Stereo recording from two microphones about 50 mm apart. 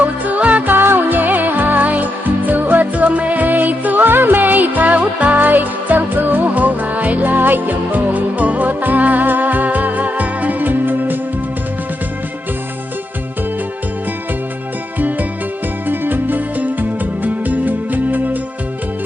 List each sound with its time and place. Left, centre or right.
0.0 s music: right
14.9 s music: right